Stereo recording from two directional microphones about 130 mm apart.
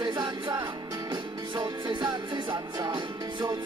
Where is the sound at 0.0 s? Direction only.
35° right (ahead or behind).